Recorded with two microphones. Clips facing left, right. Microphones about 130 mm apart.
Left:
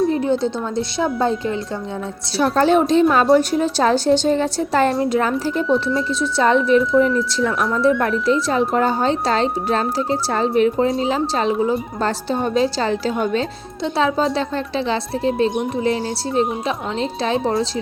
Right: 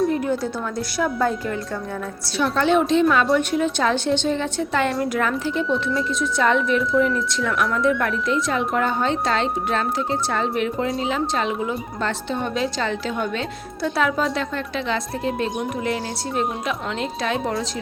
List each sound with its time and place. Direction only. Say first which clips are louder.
0.1 s a woman's voice: left 4 dB; 25° left (ahead or behind)
2.4 s a woman's voice: left 4 dB; 40° left (ahead or behind)
5.6 s speech: left 4 dB; centre (ahead or behind)
6.1 s a woman's voice: left 4 dB; 30° left (ahead or behind)